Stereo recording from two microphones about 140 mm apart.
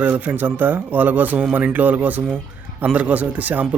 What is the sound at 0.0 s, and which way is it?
Speech, 10° right (ahead or behind).